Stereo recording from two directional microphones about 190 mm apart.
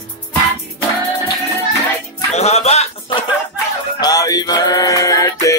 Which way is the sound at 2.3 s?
35° left (ahead or behind).